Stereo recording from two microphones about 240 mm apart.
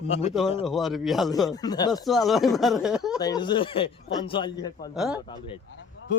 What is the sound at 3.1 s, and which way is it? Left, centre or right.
Speech, centre.